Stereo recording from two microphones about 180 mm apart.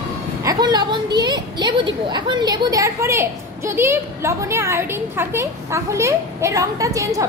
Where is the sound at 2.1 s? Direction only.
25° right (ahead or behind).